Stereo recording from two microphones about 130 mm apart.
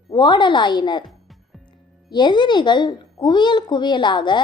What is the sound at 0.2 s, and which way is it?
Speech, 35° left (ahead or behind).